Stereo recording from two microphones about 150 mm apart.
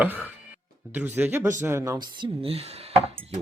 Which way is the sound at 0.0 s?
10° right (ahead or behind).